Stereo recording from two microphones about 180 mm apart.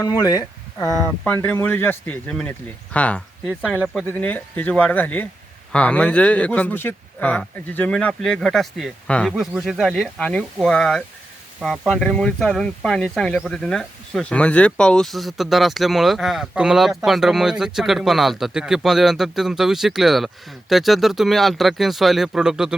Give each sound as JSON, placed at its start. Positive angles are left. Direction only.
{"t": 0.0, "sound": "speech", "side_deg": 20}
{"t": 0.9, "sound": "speech", "side_deg": 10}
{"t": 4.1, "sound": "speech", "side_deg": 10}